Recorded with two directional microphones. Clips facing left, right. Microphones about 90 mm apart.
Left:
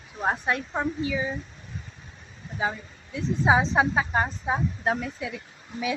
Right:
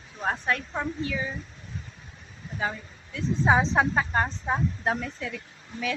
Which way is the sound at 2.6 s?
15° left (ahead or behind).